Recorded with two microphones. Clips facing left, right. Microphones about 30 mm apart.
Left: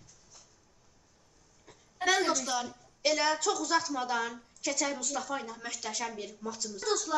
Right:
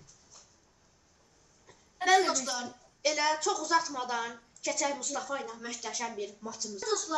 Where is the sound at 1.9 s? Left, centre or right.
Centre.